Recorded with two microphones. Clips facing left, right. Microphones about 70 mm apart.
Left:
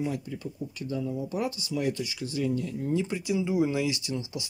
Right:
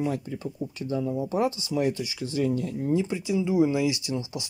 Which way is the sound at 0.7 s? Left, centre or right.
Right.